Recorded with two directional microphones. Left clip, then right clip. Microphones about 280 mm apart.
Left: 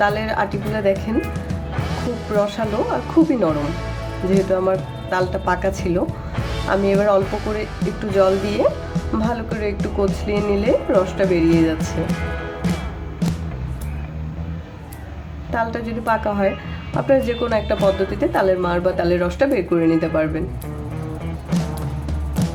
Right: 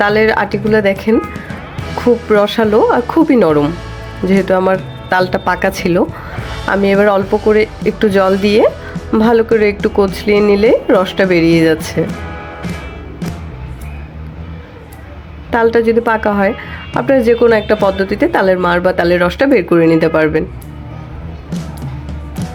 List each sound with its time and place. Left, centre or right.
0.0 s speech: right
2.3 s speech: right
15.4 s speech: right
22.4 s music: centre